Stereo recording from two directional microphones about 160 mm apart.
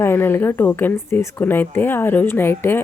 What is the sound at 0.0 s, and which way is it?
Speech, 15° left (ahead or behind).